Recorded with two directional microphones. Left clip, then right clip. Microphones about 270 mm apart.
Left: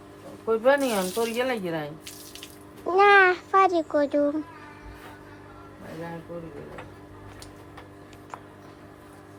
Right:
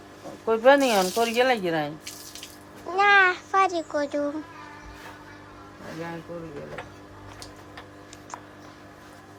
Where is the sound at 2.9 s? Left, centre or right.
Centre.